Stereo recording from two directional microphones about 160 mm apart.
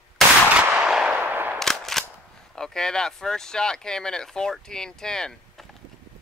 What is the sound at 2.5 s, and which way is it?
Speech, 5° left (ahead or behind).